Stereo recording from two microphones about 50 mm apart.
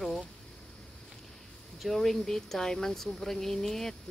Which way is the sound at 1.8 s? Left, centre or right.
Centre.